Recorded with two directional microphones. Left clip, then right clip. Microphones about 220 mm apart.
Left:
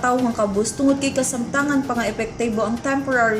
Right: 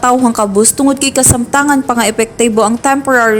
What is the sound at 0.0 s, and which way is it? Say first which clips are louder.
A woman's voice: right 9 dB; 50° right (ahead or behind).